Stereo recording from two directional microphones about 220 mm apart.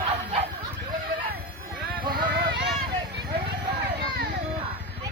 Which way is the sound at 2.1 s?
50° right (ahead or behind).